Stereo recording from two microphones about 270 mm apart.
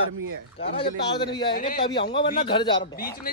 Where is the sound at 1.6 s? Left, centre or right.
Left.